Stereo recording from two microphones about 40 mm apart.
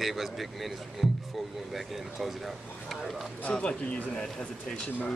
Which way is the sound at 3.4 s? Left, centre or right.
Left.